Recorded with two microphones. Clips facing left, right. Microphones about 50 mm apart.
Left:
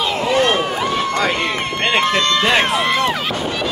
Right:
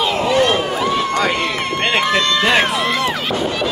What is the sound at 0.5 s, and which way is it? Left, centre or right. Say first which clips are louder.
Run: even; centre.